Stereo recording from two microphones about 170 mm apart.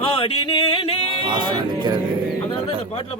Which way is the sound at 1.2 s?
25° right (ahead or behind).